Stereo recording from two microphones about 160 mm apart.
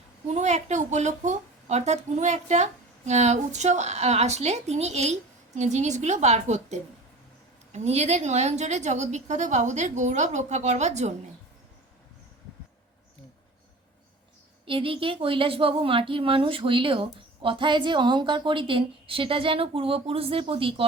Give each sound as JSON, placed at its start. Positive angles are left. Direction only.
{"t": 0.3, "sound": "a woman's voice", "side_deg": -45}
{"t": 14.6, "sound": "speech", "side_deg": -35}